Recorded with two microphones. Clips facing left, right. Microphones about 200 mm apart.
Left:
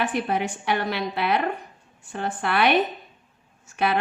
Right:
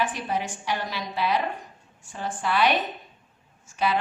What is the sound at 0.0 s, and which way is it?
A woman's voice, 60° left (ahead or behind).